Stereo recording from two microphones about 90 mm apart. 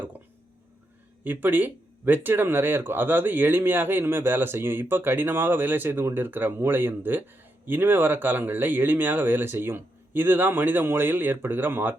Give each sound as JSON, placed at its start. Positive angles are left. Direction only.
{"t": 1.2, "sound": "speech", "side_deg": -20}